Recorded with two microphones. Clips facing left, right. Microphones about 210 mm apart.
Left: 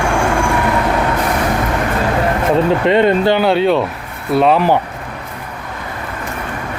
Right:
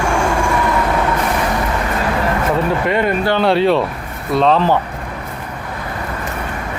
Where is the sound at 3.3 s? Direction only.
Centre (ahead or behind).